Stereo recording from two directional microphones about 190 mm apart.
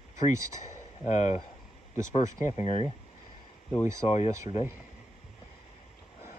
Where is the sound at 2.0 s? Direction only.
35° left (ahead or behind).